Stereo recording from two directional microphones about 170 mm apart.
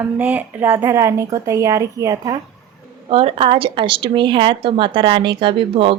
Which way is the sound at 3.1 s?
35° right (ahead or behind).